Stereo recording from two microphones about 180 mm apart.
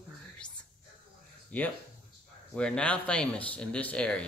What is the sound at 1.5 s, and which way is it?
A woman's voice, 10° left (ahead or behind).